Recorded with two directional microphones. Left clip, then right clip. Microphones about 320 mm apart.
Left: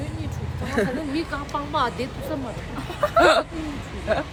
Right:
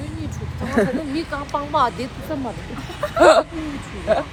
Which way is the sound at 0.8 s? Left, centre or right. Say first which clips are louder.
Right 5 dB; centre.